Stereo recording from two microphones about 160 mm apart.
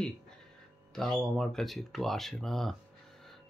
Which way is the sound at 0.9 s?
5° left (ahead or behind).